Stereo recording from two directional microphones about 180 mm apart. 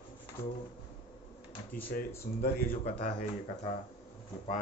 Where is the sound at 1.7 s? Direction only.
50° left (ahead or behind).